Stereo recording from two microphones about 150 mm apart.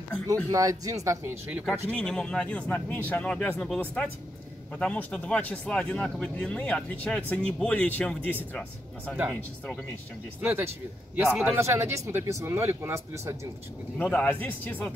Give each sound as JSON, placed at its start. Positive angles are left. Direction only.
{"t": 0.5, "sound": "speech", "side_deg": -20}
{"t": 1.9, "sound": "speech", "side_deg": 5}
{"t": 10.4, "sound": "speech", "side_deg": -15}
{"t": 11.1, "sound": "a man's voice", "side_deg": 0}
{"t": 11.5, "sound": "speech", "side_deg": -15}
{"t": 14.0, "sound": "speech", "side_deg": 10}